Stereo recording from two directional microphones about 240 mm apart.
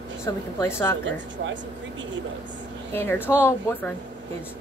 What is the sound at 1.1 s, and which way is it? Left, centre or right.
Speech, right.